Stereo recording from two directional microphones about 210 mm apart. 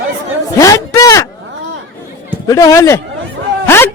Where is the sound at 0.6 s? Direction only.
15° left (ahead or behind).